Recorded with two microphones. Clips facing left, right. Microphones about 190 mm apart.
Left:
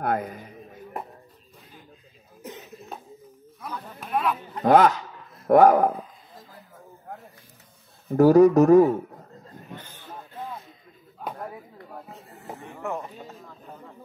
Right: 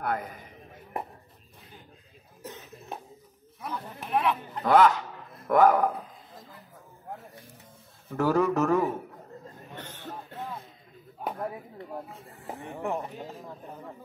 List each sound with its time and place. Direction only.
0.0 s speech: 45° left (ahead or behind)
2.4 s cough: 15° left (ahead or behind)
3.6 s speech: 25° right (ahead or behind)
4.6 s speech: 45° left (ahead or behind)
8.1 s speech: 35° left (ahead or behind)
9.8 s a sound: 70° right (ahead or behind)
12.5 s a sound: 30° right (ahead or behind)